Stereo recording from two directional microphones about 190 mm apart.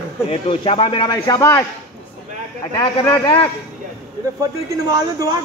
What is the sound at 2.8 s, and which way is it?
Speech, 25° left (ahead or behind).